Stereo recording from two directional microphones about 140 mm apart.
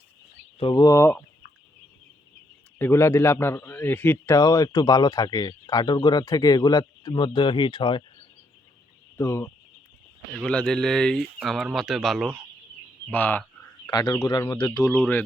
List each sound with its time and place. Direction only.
0.6 s speech: 30° left (ahead or behind)
2.7 s a man's voice: 15° left (ahead or behind)
4.4 s speech: 25° left (ahead or behind)
9.1 s speech: 20° left (ahead or behind)
10.3 s speech: 5° left (ahead or behind)
13.1 s a man's voice: 15° left (ahead or behind)
13.8 s speech: 30° left (ahead or behind)